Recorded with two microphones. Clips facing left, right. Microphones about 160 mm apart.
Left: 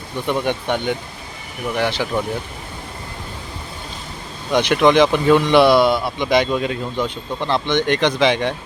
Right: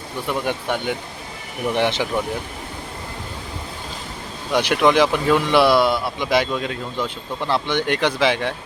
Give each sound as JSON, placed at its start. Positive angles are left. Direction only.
{"t": 0.3, "sound": "speech", "side_deg": -5}
{"t": 1.7, "sound": "speech", "side_deg": -20}
{"t": 4.5, "sound": "speech", "side_deg": -5}
{"t": 7.4, "sound": "speech", "side_deg": -10}